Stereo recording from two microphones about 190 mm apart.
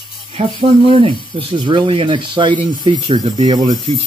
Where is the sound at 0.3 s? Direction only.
30° right (ahead or behind).